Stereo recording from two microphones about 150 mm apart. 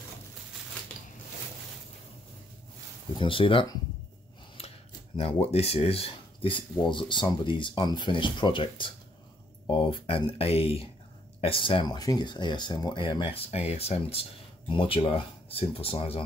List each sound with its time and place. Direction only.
3.2 s speech: 35° left (ahead or behind)
5.1 s speech: 45° left (ahead or behind)